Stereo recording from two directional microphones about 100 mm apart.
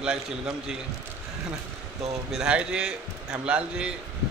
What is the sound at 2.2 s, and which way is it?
A man's voice, 5° right (ahead or behind).